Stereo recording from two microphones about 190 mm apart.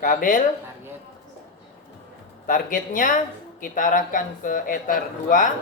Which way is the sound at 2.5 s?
45° left (ahead or behind).